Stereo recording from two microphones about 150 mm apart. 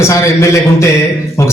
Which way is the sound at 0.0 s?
20° left (ahead or behind).